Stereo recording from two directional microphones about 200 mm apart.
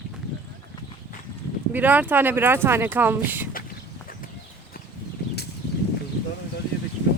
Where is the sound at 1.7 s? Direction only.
10° right (ahead or behind).